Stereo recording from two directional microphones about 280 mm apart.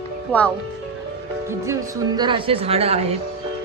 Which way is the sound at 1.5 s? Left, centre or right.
Centre.